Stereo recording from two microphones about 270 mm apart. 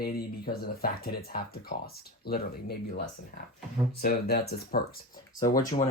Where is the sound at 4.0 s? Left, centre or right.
Left.